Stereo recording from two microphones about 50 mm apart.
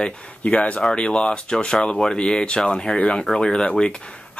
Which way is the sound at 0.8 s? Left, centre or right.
Centre.